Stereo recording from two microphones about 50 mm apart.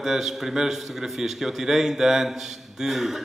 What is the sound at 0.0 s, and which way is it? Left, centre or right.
A man's voice, centre.